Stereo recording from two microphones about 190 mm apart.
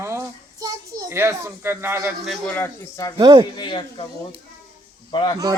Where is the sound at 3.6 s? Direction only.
25° left (ahead or behind).